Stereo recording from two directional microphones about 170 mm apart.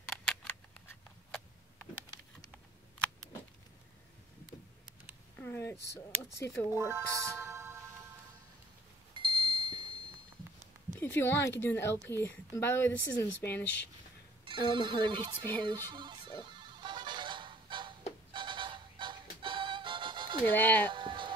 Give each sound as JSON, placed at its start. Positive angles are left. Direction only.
{"t": 0.1, "sound": "scissors", "side_deg": 5}
{"t": 5.4, "sound": "a sound", "side_deg": 15}
{"t": 6.7, "sound": "speech", "side_deg": -15}
{"t": 9.1, "sound": "a sound", "side_deg": -30}
{"t": 11.0, "sound": "a woman's voice", "side_deg": 10}
{"t": 14.4, "sound": "speech", "side_deg": -30}
{"t": 15.6, "sound": "music", "side_deg": -30}
{"t": 16.5, "sound": "honk", "side_deg": -25}
{"t": 18.3, "sound": "music", "side_deg": -30}
{"t": 20.4, "sound": "a woman's voice", "side_deg": 10}
{"t": 20.9, "sound": "music", "side_deg": -30}